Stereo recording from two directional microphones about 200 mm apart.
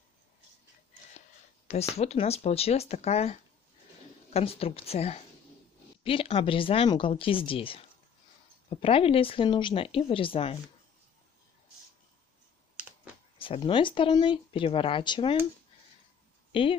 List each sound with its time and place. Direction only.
1.7 s speech: 30° left (ahead or behind)
12.7 s a sound: 5° right (ahead or behind)
13.4 s speech: 25° left (ahead or behind)